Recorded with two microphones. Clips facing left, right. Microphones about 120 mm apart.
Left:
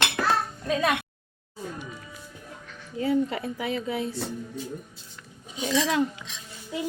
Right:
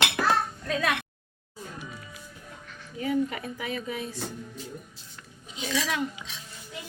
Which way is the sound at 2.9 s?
25° left (ahead or behind).